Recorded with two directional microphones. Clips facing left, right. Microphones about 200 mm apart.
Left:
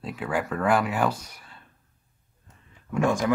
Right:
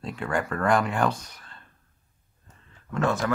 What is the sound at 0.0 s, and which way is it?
Speech, 5° left (ahead or behind).